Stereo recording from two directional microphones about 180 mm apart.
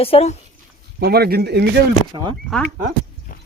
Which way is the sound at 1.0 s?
65° right (ahead or behind).